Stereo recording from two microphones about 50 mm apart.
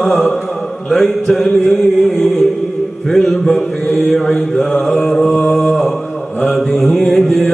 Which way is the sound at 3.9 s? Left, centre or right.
Centre.